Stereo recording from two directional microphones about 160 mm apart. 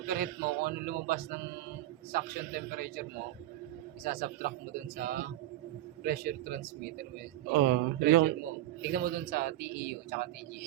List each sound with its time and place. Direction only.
0.0 s a man's voice: 70° right (ahead or behind)
7.5 s a man's voice: 80° right